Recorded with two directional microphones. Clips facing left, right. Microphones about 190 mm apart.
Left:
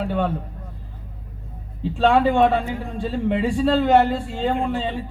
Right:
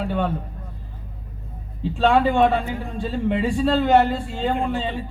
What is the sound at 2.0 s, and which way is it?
A man's voice, 40° left (ahead or behind).